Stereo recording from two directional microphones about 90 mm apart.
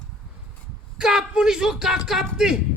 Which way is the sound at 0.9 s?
5° right (ahead or behind).